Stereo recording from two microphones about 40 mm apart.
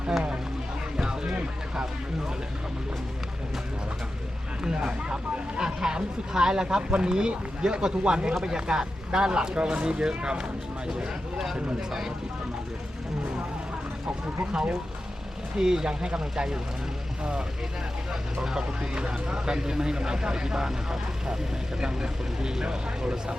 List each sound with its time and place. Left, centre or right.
0.9 s music: centre
4.6 s speech: centre
11.9 s speech: centre
15.5 s speech: centre
18.4 s speech: centre